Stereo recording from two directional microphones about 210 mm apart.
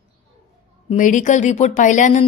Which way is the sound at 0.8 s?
40° left (ahead or behind).